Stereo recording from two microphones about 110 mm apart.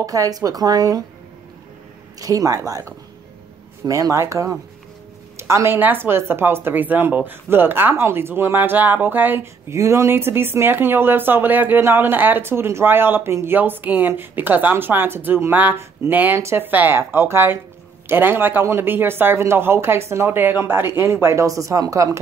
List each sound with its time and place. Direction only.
0.0 s speech: 35° right (ahead or behind)
2.1 s speech: 30° right (ahead or behind)